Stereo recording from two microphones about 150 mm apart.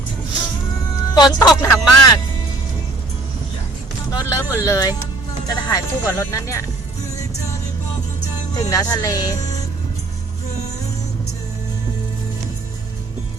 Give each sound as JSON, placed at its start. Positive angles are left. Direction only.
{"t": 1.1, "sound": "speech", "side_deg": 25}
{"t": 4.1, "sound": "speech", "side_deg": 25}
{"t": 8.5, "sound": "speech", "side_deg": 25}